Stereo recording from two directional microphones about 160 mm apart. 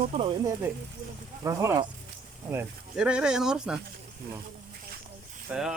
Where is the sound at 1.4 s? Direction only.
20° right (ahead or behind); by 3.7 s 5° right (ahead or behind).